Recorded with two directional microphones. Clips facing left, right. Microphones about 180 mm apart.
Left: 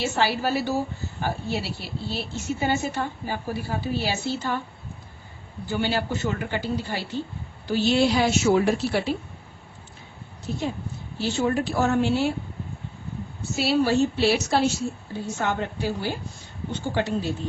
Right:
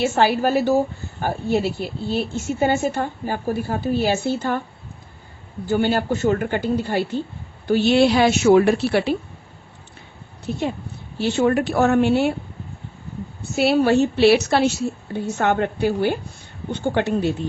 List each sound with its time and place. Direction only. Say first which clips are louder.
0.0 s a woman's voice: right 6 dB; 50° right (ahead or behind)
5.6 s a woman's voice: right 6 dB; 50° right (ahead or behind); by 9.1 s 65° right (ahead or behind)
10.5 s speech: right 4 dB; 65° right (ahead or behind)
13.6 s speech: right 5 dB; 60° right (ahead or behind)